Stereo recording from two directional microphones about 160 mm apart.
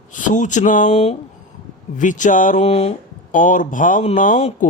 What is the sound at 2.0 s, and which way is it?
Speech, 50° left (ahead or behind).